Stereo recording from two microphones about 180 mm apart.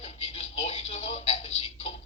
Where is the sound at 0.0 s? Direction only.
35° left (ahead or behind).